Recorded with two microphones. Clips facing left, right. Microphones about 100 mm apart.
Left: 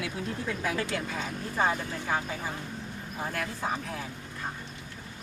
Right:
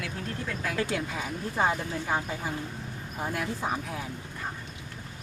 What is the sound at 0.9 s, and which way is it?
Speech, 10° right (ahead or behind).